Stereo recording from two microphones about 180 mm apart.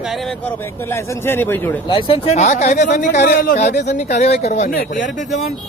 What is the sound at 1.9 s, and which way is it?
Speech, 30° left (ahead or behind).